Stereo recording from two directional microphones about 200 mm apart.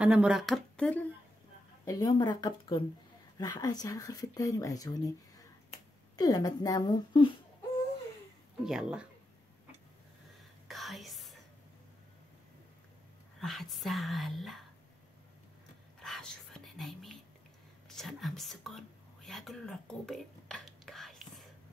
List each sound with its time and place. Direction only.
0.0 s speech: 5° right (ahead or behind)
1.9 s speech: 15° left (ahead or behind)
6.1 s speech: 20° left (ahead or behind)
8.6 s speech: 5° right (ahead or behind)
10.7 s whispering: centre (ahead or behind)
13.4 s speech: centre (ahead or behind)
16.0 s whispering: 5° left (ahead or behind)